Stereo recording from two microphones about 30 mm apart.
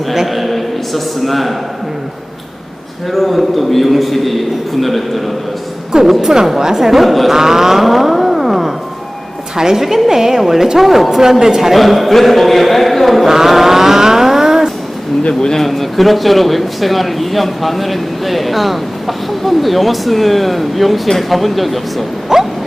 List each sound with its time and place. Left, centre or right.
0.3 s a man's voice: centre
3.1 s speech: centre
6.2 s speech: centre
7.0 s speech: centre
7.3 s music: centre
9.6 s a woman's voice: centre
11.8 s speech: centre
13.2 s vehicle: centre
15.3 s speech: left
15.6 s speech: centre
22.3 s a sound: centre